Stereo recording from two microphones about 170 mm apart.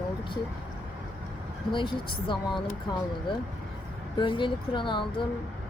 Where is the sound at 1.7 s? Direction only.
30° left (ahead or behind).